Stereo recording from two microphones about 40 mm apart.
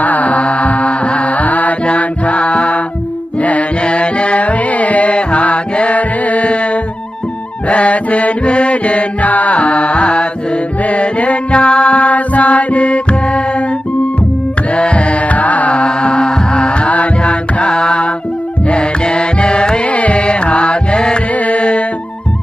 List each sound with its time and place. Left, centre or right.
0.0 s mantra: left
1.9 s music: left
14.7 s music: left
19.9 s music: left